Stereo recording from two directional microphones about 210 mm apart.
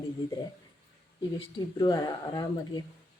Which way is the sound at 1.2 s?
20° left (ahead or behind).